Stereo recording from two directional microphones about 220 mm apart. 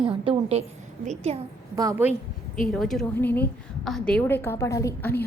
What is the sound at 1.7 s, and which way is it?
Speech, 15° right (ahead or behind).